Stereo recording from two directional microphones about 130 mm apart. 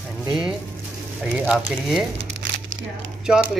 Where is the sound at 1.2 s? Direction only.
10° right (ahead or behind).